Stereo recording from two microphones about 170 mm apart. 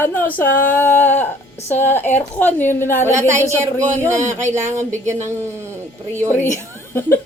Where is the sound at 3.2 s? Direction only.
15° right (ahead or behind).